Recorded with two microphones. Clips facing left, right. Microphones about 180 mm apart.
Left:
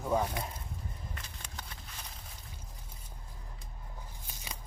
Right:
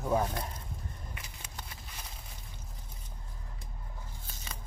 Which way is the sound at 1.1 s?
10° right (ahead or behind).